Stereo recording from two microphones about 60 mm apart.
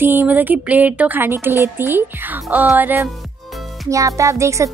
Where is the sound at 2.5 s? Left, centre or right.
Right.